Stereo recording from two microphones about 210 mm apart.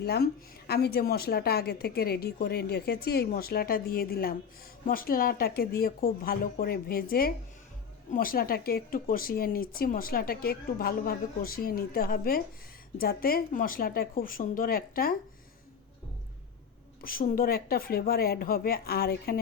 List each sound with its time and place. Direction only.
0.0 s speech: 50° left (ahead or behind)
17.0 s speech: 40° left (ahead or behind)